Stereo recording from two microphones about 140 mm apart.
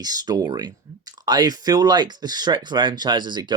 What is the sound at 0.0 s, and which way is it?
Speech, 30° right (ahead or behind).